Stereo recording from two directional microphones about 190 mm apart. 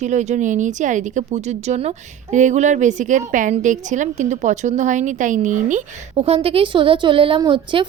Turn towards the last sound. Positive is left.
turn(degrees=-25)  # may be behind; listen again after turning